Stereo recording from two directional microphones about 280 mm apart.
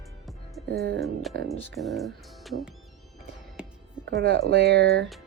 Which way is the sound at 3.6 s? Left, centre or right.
Centre.